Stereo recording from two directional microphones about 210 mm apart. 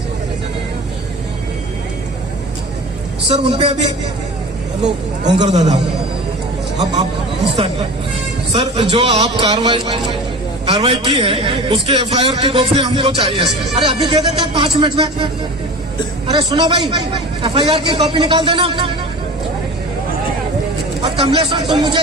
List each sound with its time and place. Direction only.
3.2 s a man's voice: 30° right (ahead or behind)
5.4 s a man's voice: 35° right (ahead or behind)
7.5 s a man's voice: 25° right (ahead or behind)
21.0 s a man's voice: 25° right (ahead or behind)